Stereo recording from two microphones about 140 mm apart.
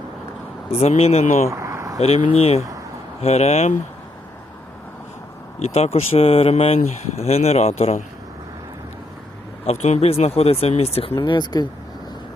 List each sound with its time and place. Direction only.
0.7 s speech: 50° left (ahead or behind)
1.5 s vehicle: 20° right (ahead or behind)
2.0 s speech: 50° left (ahead or behind)
5.5 s speech: 50° left (ahead or behind)
9.6 s speech: 50° left (ahead or behind)
11.1 s speech: 30° left (ahead or behind)